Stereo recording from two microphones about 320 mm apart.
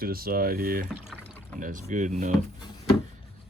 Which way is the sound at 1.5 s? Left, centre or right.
Right.